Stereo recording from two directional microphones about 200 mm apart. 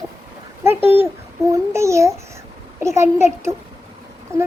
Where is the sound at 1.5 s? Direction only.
15° right (ahead or behind).